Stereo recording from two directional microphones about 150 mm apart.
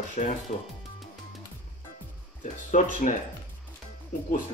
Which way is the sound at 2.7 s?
55° left (ahead or behind).